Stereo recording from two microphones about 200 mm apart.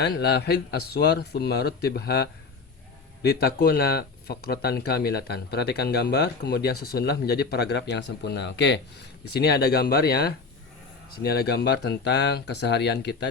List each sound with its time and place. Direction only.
0.0 s speech: 55° left (ahead or behind)